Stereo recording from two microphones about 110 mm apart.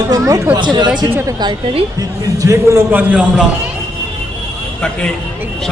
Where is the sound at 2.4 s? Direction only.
25° right (ahead or behind).